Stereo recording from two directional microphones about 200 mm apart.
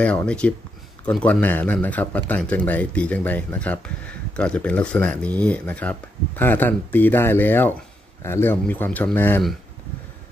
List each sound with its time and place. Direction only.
0.0 s speech: 5° left (ahead or behind)